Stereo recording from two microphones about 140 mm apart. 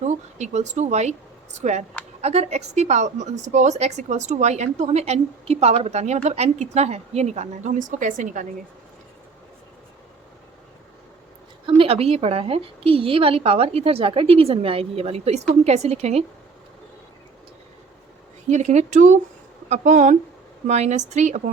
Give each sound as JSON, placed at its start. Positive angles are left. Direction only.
{"t": 0.1, "sound": "a woman's voice", "side_deg": -55}
{"t": 11.7, "sound": "a woman's voice", "side_deg": -45}
{"t": 18.4, "sound": "a woman's voice", "side_deg": -55}